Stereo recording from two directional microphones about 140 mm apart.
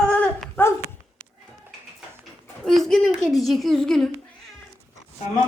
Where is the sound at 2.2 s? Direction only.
Centre (ahead or behind).